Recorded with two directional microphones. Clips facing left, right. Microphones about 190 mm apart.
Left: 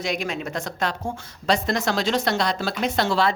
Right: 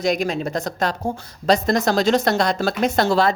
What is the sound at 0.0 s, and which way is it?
A woman's voice, 40° right (ahead or behind).